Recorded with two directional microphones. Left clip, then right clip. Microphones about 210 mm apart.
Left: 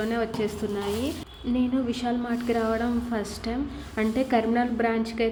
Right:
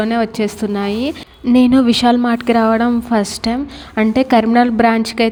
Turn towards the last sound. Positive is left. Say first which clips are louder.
# right 12 dB
turn(degrees=-45)  # may be behind; listen again after turning